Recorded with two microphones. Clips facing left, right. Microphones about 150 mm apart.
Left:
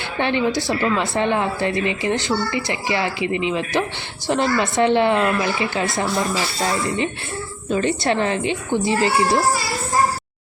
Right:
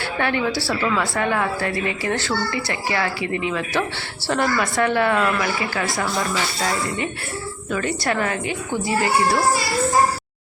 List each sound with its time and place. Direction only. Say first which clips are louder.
0.2 s a woman's voice: left 3 dB; 20° left (ahead or behind)
7.7 s a woman's voice: left 4 dB; 25° left (ahead or behind)